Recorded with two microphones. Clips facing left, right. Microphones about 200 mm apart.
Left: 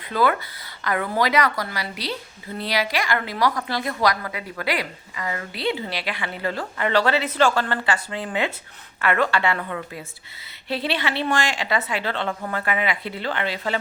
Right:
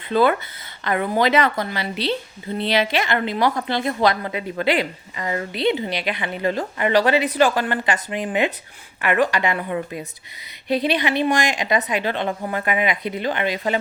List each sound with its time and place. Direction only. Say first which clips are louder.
0.1 s a woman's voice: right 4 dB; 25° right (ahead or behind)